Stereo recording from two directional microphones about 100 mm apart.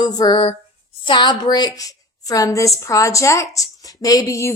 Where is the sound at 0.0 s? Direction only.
45° left (ahead or behind).